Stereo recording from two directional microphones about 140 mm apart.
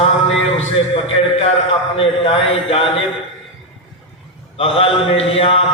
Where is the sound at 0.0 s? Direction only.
45° left (ahead or behind).